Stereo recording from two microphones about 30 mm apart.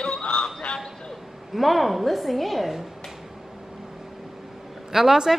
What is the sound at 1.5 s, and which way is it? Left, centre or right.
A woman's voice, centre.